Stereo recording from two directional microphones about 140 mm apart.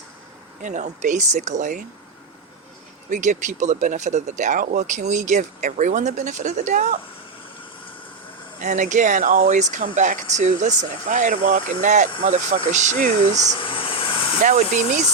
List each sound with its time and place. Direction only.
0.6 s speech: 60° right (ahead or behind)
3.1 s speech: 60° right (ahead or behind)
8.6 s speech: 60° right (ahead or behind)
13.5 s a sound: 40° left (ahead or behind)